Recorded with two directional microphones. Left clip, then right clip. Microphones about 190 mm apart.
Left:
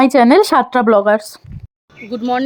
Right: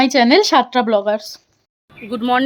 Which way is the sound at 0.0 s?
15° left (ahead or behind).